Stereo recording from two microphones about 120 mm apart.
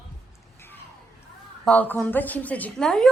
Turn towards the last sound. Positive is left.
turn(degrees=5)  # may be behind; listen again after turning